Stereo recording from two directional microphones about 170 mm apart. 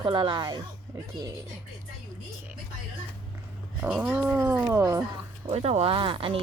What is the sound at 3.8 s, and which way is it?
Cat, 5° right (ahead or behind).